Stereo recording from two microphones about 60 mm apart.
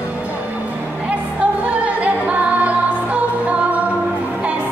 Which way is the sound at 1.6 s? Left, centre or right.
Right.